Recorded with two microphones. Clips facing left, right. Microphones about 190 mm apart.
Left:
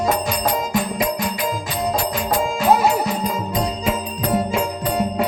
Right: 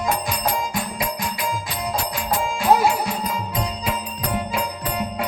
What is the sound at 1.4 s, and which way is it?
Music, 40° left (ahead or behind).